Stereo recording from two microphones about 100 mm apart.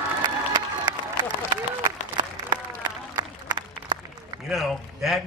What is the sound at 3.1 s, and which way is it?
Applause, 45° right (ahead or behind).